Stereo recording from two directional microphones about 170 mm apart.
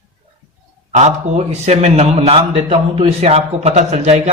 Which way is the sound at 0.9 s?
40° right (ahead or behind).